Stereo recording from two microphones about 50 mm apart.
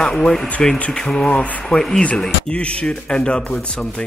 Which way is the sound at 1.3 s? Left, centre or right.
Left.